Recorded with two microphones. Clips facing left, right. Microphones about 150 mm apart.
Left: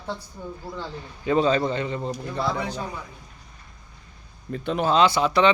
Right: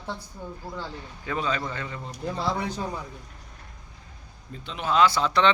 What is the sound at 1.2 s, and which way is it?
Speech, 30° left (ahead or behind).